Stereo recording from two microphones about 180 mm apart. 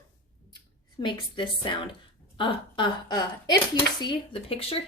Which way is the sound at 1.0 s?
25° left (ahead or behind).